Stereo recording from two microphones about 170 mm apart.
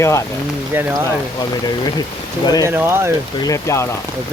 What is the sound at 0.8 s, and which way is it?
Speech, 15° right (ahead or behind).